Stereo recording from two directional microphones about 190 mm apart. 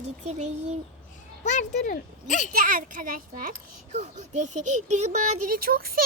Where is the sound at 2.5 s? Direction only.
45° right (ahead or behind).